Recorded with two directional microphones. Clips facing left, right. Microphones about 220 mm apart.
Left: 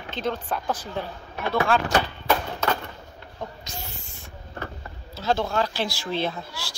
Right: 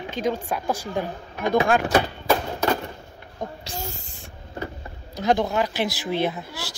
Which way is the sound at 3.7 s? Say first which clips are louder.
Right 6 dB; 45° right (ahead or behind).